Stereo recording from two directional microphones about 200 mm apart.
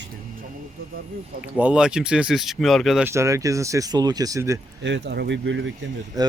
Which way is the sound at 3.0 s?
15° right (ahead or behind).